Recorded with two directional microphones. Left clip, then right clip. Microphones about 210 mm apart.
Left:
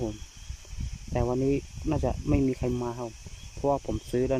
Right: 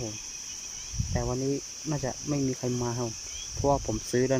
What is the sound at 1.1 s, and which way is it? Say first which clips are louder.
Speech: left 4 dB; 15° left (ahead or behind).